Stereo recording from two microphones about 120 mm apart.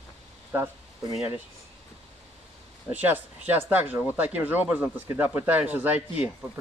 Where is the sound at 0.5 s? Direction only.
20° right (ahead or behind).